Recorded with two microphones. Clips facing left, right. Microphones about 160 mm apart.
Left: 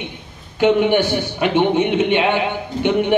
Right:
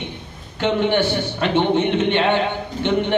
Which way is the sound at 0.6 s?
15° left (ahead or behind).